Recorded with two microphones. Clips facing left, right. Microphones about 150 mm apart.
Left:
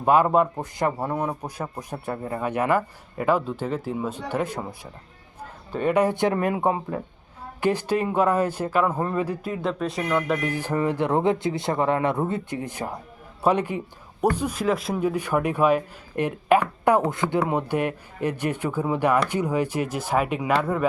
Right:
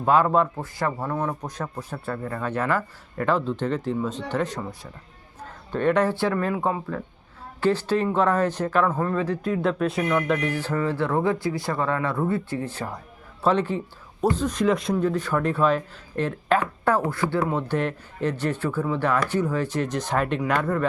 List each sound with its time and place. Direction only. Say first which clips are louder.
0.0 s a man's voice: left 1 dB; 15° left (ahead or behind)